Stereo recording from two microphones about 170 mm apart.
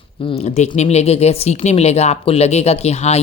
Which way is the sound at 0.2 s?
35° left (ahead or behind).